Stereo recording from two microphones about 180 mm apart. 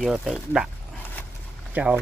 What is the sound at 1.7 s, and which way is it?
Speech, 5° right (ahead or behind).